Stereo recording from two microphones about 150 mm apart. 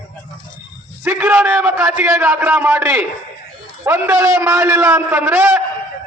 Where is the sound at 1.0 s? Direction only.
10° right (ahead or behind).